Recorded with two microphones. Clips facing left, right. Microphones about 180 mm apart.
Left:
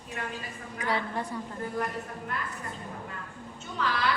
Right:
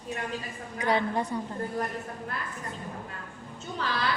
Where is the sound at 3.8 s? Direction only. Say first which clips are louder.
Left 2 dB; 30° right (ahead or behind).